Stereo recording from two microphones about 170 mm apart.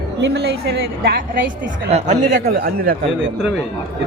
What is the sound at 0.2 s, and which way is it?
A woman's voice, 75° right (ahead or behind).